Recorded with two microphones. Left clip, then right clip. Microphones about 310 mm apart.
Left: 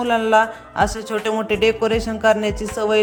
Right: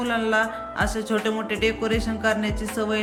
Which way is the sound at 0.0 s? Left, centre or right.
Left.